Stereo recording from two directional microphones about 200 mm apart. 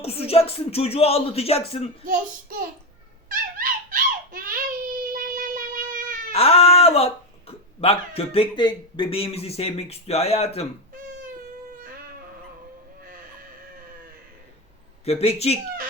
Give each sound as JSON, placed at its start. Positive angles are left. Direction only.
{"t": 0.0, "sound": "speech", "side_deg": 30}
{"t": 3.2, "sound": "whimper", "side_deg": -45}
{"t": 6.3, "sound": "speech", "side_deg": 30}
{"t": 15.0, "sound": "speech", "side_deg": 30}